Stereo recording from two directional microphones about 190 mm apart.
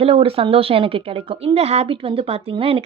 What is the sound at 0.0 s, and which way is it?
Speech, 30° right (ahead or behind).